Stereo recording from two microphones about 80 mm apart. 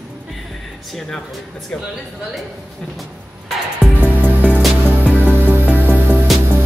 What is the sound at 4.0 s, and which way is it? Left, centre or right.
Music, right.